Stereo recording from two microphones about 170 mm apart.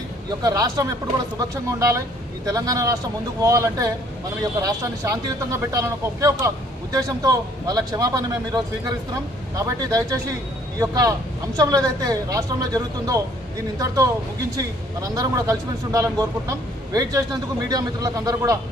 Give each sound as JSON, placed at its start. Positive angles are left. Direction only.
{"t": 0.4, "sound": "speech", "side_deg": -20}